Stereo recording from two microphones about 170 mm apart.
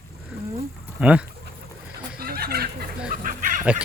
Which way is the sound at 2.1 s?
65° right (ahead or behind).